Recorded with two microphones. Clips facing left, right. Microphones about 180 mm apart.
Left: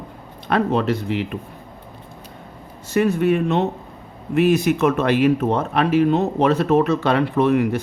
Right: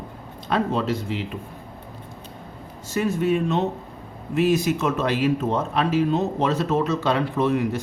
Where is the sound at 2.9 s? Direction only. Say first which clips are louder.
Left 4 dB; 60° left (ahead or behind).